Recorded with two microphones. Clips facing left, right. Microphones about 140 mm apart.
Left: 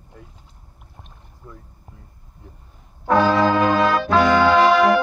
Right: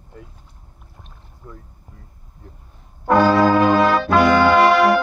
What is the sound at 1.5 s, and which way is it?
Speech, 5° left (ahead or behind).